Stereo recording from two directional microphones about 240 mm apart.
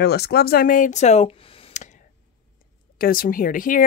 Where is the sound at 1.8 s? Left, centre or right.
Left.